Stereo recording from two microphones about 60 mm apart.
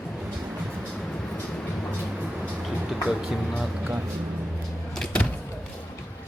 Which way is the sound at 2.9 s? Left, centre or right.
Centre.